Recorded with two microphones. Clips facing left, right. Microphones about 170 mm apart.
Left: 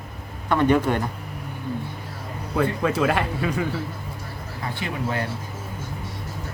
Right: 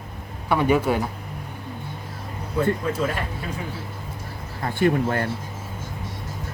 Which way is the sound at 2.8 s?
90° left.